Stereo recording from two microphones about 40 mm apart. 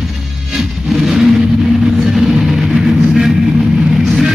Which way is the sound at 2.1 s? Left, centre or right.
Centre.